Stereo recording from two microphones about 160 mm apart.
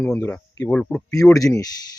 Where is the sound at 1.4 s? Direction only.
20° left (ahead or behind).